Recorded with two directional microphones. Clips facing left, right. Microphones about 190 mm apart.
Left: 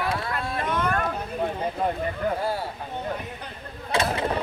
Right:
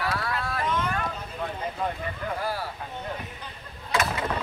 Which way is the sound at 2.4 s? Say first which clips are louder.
Left 3 dB; 25° left (ahead or behind).